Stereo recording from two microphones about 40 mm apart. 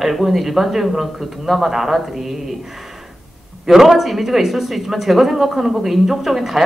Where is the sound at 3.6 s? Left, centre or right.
Centre.